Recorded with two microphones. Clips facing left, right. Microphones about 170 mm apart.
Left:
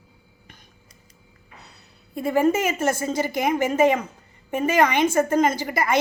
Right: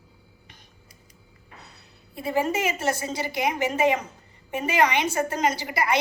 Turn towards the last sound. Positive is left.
turn(degrees=50)  # may be behind; listen again after turning